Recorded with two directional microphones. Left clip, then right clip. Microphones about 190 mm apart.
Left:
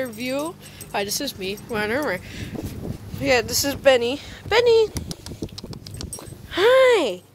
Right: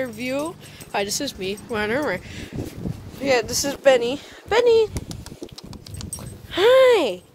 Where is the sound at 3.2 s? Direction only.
5° left (ahead or behind).